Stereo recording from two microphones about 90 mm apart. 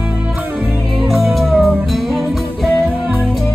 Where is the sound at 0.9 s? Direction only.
Centre (ahead or behind).